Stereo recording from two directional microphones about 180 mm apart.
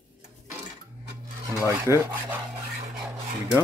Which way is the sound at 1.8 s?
15° right (ahead or behind).